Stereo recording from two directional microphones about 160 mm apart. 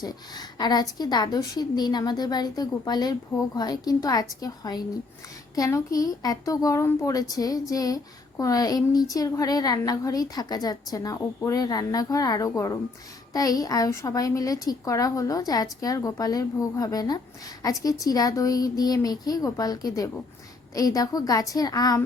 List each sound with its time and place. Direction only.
0.0 s speech: 25° left (ahead or behind)